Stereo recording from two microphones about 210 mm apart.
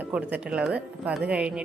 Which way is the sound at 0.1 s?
5° right (ahead or behind).